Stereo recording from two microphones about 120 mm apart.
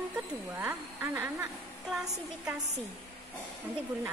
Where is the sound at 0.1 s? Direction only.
10° right (ahead or behind).